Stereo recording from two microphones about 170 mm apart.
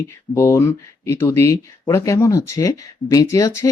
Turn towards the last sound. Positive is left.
turn(degrees=20)  # may be behind; listen again after turning